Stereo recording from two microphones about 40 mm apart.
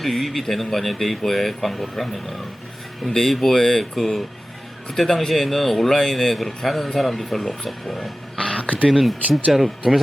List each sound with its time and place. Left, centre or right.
0.0 s a man's voice: centre
8.4 s a sound: left
8.9 s a man's voice: centre